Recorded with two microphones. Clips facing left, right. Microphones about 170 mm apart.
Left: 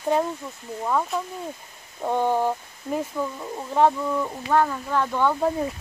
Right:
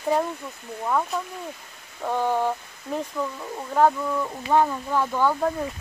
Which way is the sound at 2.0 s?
15° left (ahead or behind).